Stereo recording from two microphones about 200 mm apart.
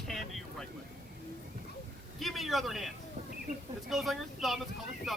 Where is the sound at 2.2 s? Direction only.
Centre (ahead or behind).